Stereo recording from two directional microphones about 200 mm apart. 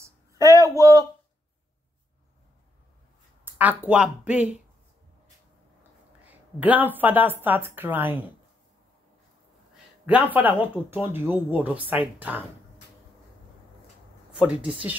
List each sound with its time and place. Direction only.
0.0 s a sound: 15° right (ahead or behind)
3.5 s speech: 10° right (ahead or behind)
6.2 s speech: 10° right (ahead or behind)
10.0 s speech: 10° right (ahead or behind)
14.3 s speech: 5° right (ahead or behind)